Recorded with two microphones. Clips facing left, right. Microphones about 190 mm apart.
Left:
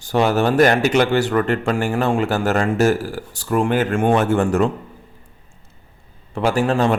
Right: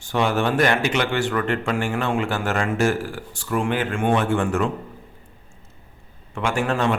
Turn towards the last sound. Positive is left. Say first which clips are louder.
# left 4 dB
turn(degrees=35)  # may be behind; listen again after turning